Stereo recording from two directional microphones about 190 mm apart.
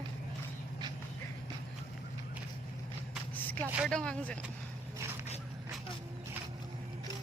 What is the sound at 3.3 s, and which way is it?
Vehicle, 10° left (ahead or behind).